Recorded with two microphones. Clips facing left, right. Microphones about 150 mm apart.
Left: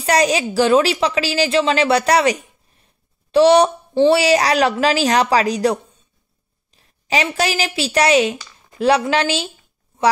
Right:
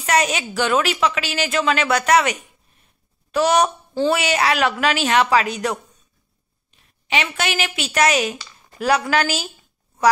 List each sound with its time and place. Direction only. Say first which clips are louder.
0.0 s a woman's voice: left 4 dB; 35° left (ahead or behind)